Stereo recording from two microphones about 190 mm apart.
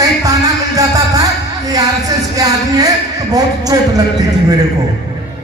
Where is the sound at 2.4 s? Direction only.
20° right (ahead or behind).